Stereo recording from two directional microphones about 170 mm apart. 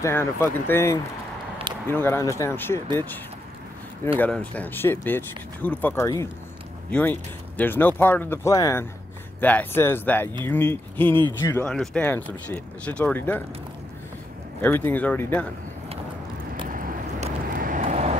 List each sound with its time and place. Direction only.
0.0 s speech: 15° left (ahead or behind)
4.2 s speech: 10° left (ahead or behind)
11.1 s speech: 30° right (ahead or behind)
11.6 s speech: 5° left (ahead or behind)
14.6 s speech: 10° left (ahead or behind)
17.2 s vehicle: 55° right (ahead or behind)